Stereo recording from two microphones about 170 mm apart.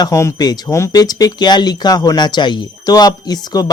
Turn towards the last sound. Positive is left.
turn(degrees=25)  # may be behind; listen again after turning